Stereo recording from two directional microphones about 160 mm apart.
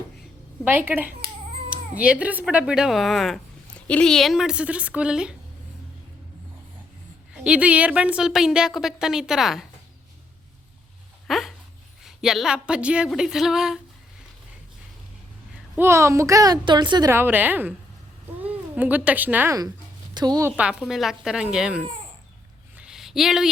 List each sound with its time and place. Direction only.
0.6 s a woman's voice: 10° right (ahead or behind)
7.3 s speech: 5° right (ahead or behind)
11.3 s a sound: centre (ahead or behind)
12.0 s speech: centre (ahead or behind)
15.7 s a woman's voice: 15° right (ahead or behind)
17.1 s a woman's voice: 15° right (ahead or behind)
20.1 s a woman's voice: 25° right (ahead or behind)
20.6 s speech: 5° right (ahead or behind)
22.7 s a sound: 5° right (ahead or behind)